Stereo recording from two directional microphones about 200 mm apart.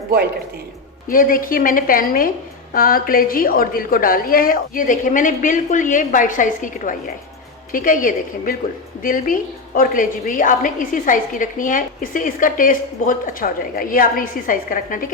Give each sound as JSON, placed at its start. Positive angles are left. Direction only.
{"t": 1.0, "sound": "a woman's voice", "side_deg": 45}